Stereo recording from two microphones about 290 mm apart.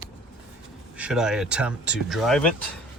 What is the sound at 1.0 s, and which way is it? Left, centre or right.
Speech, centre.